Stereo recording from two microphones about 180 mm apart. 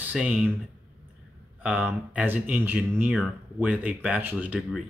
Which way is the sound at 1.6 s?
5° right (ahead or behind).